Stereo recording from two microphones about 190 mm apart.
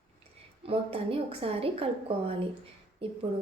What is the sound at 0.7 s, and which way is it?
A woman's voice, 30° right (ahead or behind).